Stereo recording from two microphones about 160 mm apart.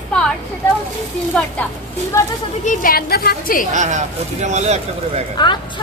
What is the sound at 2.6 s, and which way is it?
A woman's voice, 55° left (ahead or behind).